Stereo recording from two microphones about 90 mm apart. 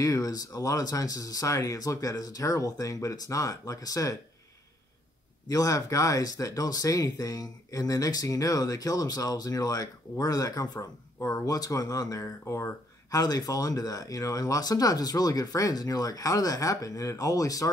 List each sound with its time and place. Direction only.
0.0 s speech: 40° left (ahead or behind)
5.5 s speech: 40° left (ahead or behind)